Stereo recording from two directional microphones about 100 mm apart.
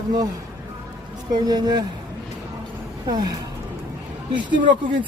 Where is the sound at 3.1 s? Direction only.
40° right (ahead or behind).